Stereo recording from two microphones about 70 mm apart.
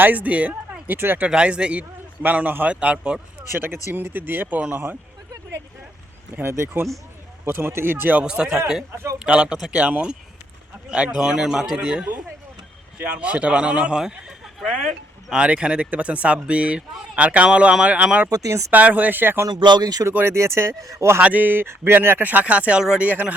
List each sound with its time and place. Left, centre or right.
0.0 s speech: right
1.3 s speech: centre; by 4.9 s right
6.3 s speech: right
8.2 s speech: centre
18.3 s speech: right
18.7 s speech: right
19.5 s speech: right
20.1 s speech: right
21.2 s speech: right